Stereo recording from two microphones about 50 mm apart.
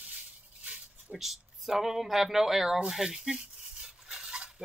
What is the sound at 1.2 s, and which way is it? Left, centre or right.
Speech, centre.